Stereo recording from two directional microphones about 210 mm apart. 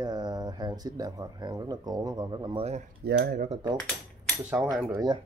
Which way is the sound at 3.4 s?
25° right (ahead or behind).